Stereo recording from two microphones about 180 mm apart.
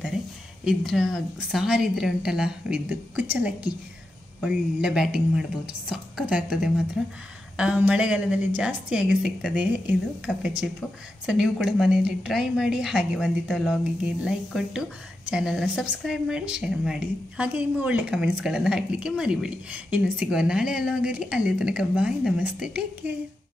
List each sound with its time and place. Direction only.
0.7 s a woman's voice: centre (ahead or behind)